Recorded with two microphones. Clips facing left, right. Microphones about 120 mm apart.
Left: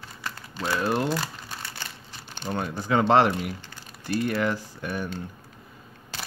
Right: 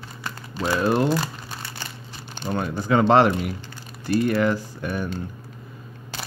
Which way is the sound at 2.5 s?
75° right (ahead or behind).